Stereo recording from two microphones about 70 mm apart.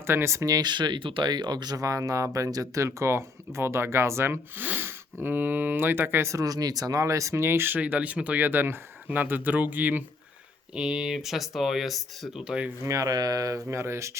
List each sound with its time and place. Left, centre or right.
0.1 s speech: right
0.4 s speech: right
1.8 s speech: right
6.2 s speech: right
7.8 s speech: right
10.8 s speech: centre
12.5 s speech: centre
12.8 s speech: right
13.7 s speech: right